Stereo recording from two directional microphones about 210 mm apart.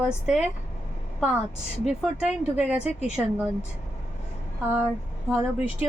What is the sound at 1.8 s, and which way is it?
Speech, 5° right (ahead or behind).